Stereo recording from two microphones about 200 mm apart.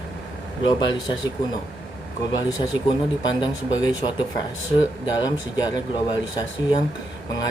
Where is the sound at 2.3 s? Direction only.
20° left (ahead or behind).